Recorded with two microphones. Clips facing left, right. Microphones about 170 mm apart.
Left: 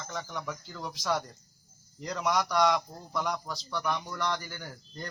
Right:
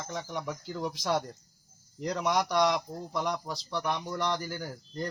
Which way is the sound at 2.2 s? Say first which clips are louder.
Even; 25° right (ahead or behind).